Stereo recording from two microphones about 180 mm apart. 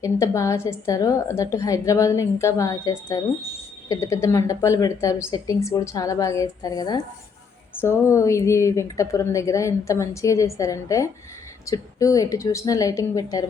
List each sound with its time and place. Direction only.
0.0 s a woman's voice: 15° left (ahead or behind)